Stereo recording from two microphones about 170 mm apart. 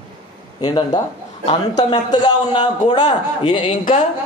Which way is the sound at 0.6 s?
25° left (ahead or behind).